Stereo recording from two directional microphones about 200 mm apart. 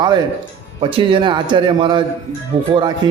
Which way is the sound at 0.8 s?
25° right (ahead or behind).